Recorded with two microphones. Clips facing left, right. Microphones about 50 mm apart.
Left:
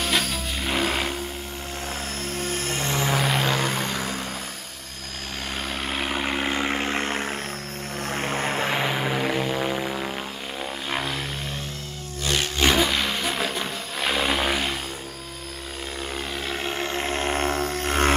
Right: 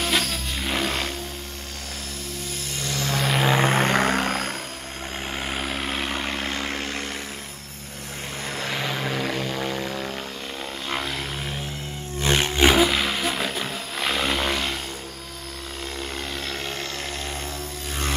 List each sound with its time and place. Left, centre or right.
0.0 s music: centre
2.3 s music: left
3.2 s vehicle: centre
3.6 s vehicle: right
5.6 s vehicle: centre
12.2 s roar: right
12.6 s roar: centre
16.4 s a sound: centre; by 18.1 s left